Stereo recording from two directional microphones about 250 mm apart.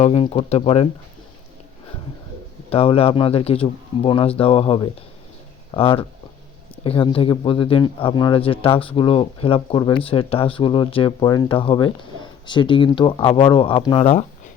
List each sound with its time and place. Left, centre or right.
0.0 s speech: left
2.6 s speech: left